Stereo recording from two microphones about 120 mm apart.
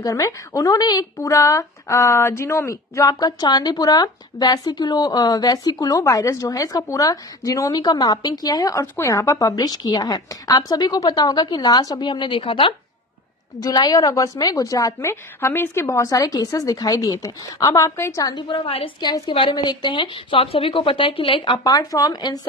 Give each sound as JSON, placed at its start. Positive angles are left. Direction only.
{"t": 0.0, "sound": "a woman's voice", "side_deg": 30}
{"t": 13.6, "sound": "a woman's voice", "side_deg": 30}
{"t": 18.5, "sound": "a woman's voice", "side_deg": 50}
{"t": 19.5, "sound": "a woman's voice", "side_deg": 35}
{"t": 21.6, "sound": "a woman's voice", "side_deg": 30}